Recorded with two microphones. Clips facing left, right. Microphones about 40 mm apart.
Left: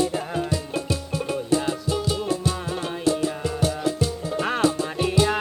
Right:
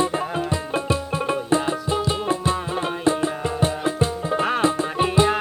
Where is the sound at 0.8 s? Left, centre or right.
Right.